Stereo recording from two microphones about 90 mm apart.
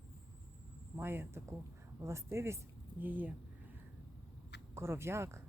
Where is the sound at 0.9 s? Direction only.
25° right (ahead or behind).